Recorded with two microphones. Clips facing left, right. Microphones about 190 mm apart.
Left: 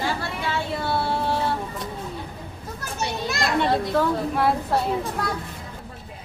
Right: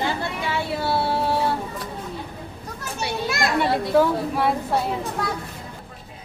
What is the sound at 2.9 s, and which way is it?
Children playing, 5° right (ahead or behind).